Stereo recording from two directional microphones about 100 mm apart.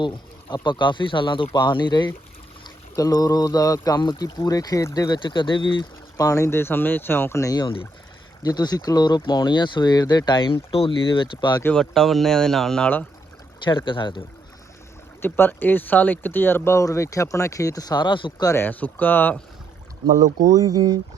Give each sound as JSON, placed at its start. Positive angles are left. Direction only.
{"t": 0.5, "sound": "speech", "side_deg": 50}
{"t": 2.9, "sound": "speech", "side_deg": 35}
{"t": 5.2, "sound": "speech", "side_deg": 55}
{"t": 6.1, "sound": "speech", "side_deg": 30}
{"t": 11.7, "sound": "speech", "side_deg": 5}
{"t": 13.7, "sound": "speech", "side_deg": 55}
{"t": 15.2, "sound": "speech", "side_deg": 20}
{"t": 18.4, "sound": "speech", "side_deg": 20}
{"t": 20.1, "sound": "speech", "side_deg": -35}